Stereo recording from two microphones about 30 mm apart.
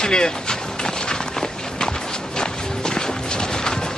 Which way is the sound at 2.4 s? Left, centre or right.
Left.